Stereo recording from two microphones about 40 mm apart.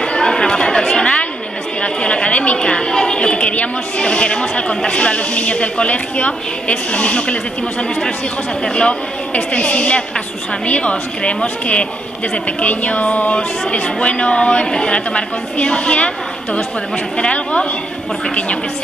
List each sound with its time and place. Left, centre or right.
0.0 s chatter: centre
2.6 s a woman's voice: centre
8.6 s a woman's voice: left
17.2 s a woman's voice: left